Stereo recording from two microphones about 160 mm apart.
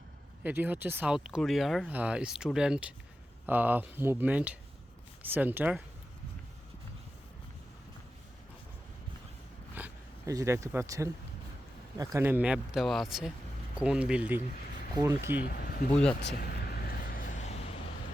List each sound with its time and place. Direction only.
0.4 s speech: 10° right (ahead or behind)
9.7 s a sound: 10° right (ahead or behind)
10.3 s speech: 20° right (ahead or behind)
15.4 s speech: 70° left (ahead or behind)
16.2 s vehicle: 75° left (ahead or behind); by 17.7 s 40° left (ahead or behind)